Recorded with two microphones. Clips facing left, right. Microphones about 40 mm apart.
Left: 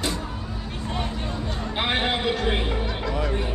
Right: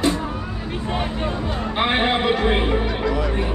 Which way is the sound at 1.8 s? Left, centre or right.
Centre.